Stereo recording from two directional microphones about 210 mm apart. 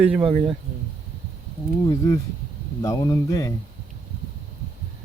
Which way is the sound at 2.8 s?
15° left (ahead or behind).